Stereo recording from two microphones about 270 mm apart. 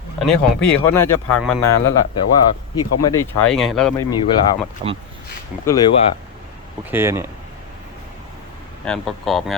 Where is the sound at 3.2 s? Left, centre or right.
Centre.